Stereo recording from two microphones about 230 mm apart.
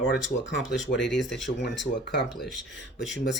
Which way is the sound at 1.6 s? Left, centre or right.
Left.